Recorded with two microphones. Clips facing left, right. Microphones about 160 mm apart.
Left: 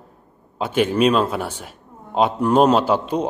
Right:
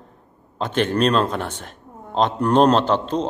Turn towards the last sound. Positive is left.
turn(degrees=10)  # may be behind; listen again after turning